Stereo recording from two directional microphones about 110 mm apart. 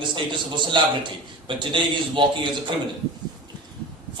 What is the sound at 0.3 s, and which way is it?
A man's voice, 45° right (ahead or behind).